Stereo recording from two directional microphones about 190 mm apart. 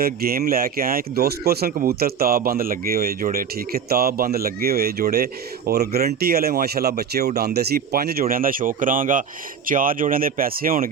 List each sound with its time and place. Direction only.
0.0 s speech: 55° right (ahead or behind)